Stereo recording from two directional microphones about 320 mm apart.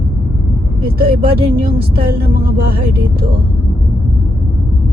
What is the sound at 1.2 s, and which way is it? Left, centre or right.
Speech, right.